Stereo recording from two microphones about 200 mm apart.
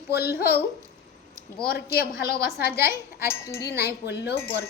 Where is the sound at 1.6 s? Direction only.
50° left (ahead or behind).